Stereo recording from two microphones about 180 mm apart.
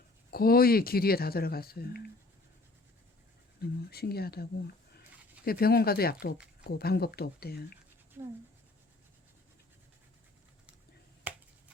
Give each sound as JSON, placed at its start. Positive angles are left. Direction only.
{"t": 0.3, "sound": "speech", "side_deg": 55}
{"t": 3.6, "sound": "speech", "side_deg": 60}
{"t": 5.5, "sound": "speech", "side_deg": 55}
{"t": 11.3, "sound": "finger snapping", "side_deg": -10}